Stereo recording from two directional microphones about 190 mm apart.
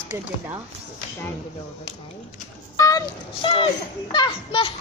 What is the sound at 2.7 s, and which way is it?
A child's voice, 15° left (ahead or behind).